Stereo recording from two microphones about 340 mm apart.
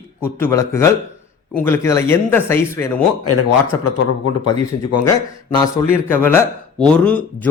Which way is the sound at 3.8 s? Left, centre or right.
Left.